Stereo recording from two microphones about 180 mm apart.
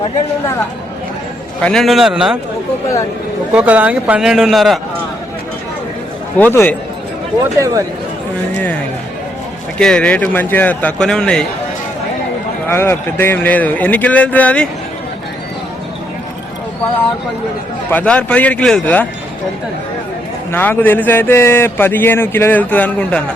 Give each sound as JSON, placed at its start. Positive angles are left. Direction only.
{"t": 1.6, "sound": "speech", "side_deg": 0}
{"t": 3.5, "sound": "speech", "side_deg": -10}
{"t": 6.4, "sound": "speech", "side_deg": 10}
{"t": 7.6, "sound": "speech", "side_deg": -20}
{"t": 9.7, "sound": "speech", "side_deg": 5}
{"t": 12.6, "sound": "speech", "side_deg": 10}
{"t": 17.9, "sound": "speech", "side_deg": 5}
{"t": 20.5, "sound": "speech", "side_deg": 10}